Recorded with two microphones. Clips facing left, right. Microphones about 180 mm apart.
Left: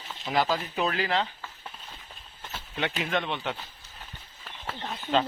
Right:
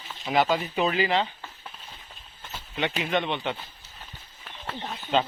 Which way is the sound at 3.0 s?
Centre (ahead or behind).